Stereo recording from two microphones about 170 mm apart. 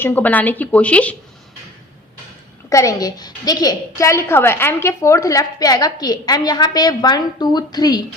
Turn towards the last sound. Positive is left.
turn(degrees=25)  # may be behind; listen again after turning